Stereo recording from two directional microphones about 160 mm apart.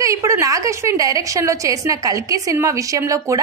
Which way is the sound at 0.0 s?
20° right (ahead or behind).